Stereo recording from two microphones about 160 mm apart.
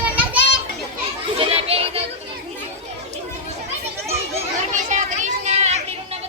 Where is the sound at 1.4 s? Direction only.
35° right (ahead or behind).